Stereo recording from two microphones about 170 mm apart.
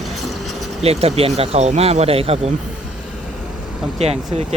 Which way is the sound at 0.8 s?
35° right (ahead or behind).